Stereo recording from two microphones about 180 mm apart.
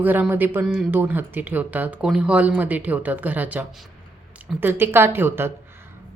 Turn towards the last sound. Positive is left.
turn(degrees=-10)  # may be behind; listen again after turning